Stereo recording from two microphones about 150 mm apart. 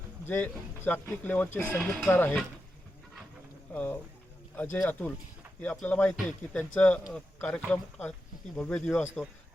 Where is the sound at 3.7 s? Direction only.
10° left (ahead or behind).